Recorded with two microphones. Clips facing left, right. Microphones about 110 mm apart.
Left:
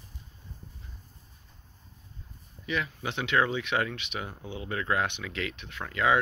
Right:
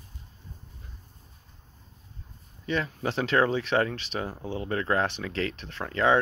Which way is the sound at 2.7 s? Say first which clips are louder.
Right 3 dB; 35° right (ahead or behind).